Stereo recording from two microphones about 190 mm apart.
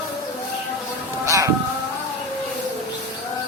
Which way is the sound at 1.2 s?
15° right (ahead or behind).